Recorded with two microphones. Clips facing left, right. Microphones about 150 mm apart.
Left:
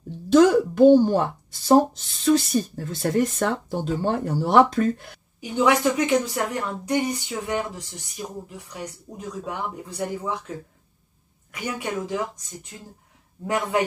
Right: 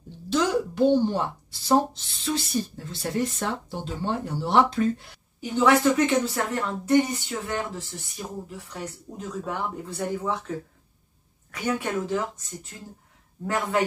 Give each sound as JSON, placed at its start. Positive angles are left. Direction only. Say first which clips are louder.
{"t": 0.3, "sound": "speech", "louder": "left 8 dB", "side_deg": 50}
{"t": 5.4, "sound": "a woman's voice", "louder": "even", "side_deg": 15}
{"t": 9.1, "sound": "a woman's voice", "louder": "right 1 dB", "side_deg": 15}
{"t": 11.5, "sound": "a woman's voice", "louder": "right 2 dB", "side_deg": 10}
{"t": 13.5, "sound": "a woman's voice", "louder": "left 2 dB", "side_deg": 15}